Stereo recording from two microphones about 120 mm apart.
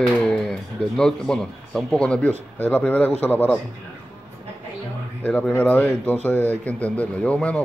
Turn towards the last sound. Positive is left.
turn(degrees=10)  # may be behind; listen again after turning